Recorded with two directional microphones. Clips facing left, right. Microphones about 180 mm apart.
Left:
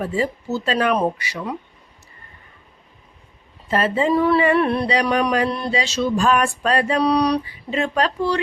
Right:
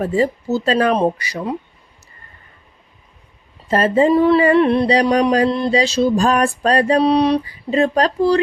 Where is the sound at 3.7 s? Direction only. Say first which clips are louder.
Right 5 dB; 40° right (ahead or behind).